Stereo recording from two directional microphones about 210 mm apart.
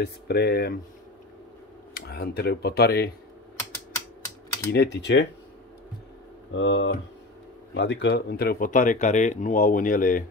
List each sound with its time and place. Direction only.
0.0 s speech: 50° left (ahead or behind)
2.0 s speech: 50° left (ahead or behind)
4.7 s speech: 55° left (ahead or behind)
6.5 s speech: 60° left (ahead or behind); by 10.2 s 40° left (ahead or behind)